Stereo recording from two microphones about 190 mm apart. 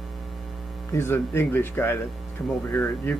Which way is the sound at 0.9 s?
15° left (ahead or behind).